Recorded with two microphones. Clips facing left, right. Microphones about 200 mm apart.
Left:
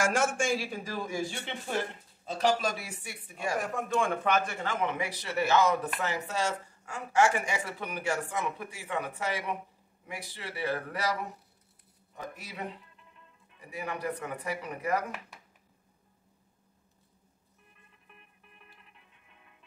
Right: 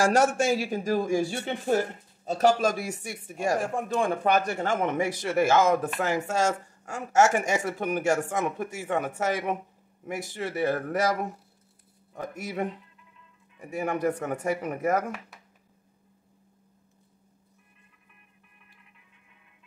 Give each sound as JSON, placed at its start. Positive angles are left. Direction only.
{"t": 0.0, "sound": "a man's voice", "side_deg": -35}
{"t": 3.5, "sound": "a man's voice", "side_deg": -30}